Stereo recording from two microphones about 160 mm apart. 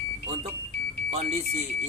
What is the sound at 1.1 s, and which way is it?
Speech, 40° right (ahead or behind).